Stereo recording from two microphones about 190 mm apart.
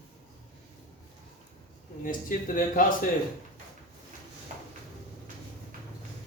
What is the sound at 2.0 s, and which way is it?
Speech, 45° left (ahead or behind).